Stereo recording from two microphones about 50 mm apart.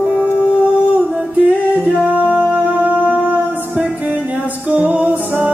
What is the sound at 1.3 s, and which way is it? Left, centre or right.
Music, right.